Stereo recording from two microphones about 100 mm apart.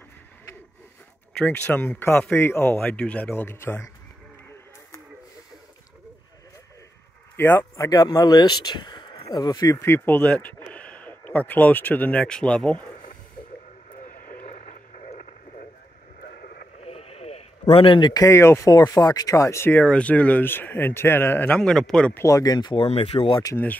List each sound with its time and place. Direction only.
1.4 s speech: 15° left (ahead or behind)
7.3 s speech: 20° left (ahead or behind)
7.7 s speech: 30° left (ahead or behind); by 9.2 s 50° left (ahead or behind)
9.3 s speech: 40° left (ahead or behind)
9.8 s speech: 20° left (ahead or behind)
16.8 s sheep: 90° left; by 18.1 s 60° left (ahead or behind)
18.1 s speech: 30° left (ahead or behind)
18.7 s speech: 40° left (ahead or behind); by 21.6 s 15° left (ahead or behind)
21.6 s speech: 5° left (ahead or behind)
22.1 s speech: 30° left (ahead or behind); by 22.8 s 50° left (ahead or behind)
22.8 s speech: 90° left; by 23.4 s 70° left (ahead or behind)
23.5 s speech: 15° left (ahead or behind)